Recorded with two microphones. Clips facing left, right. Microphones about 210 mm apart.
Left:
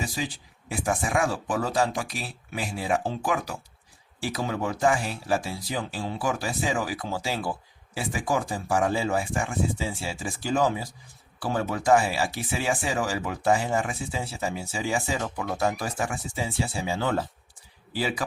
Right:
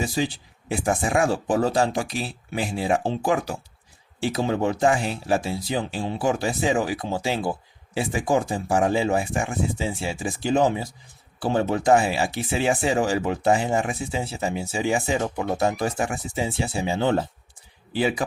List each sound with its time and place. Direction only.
0.0 s speech: 30° right (ahead or behind)